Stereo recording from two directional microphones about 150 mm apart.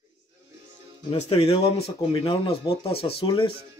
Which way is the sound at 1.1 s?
45° left (ahead or behind).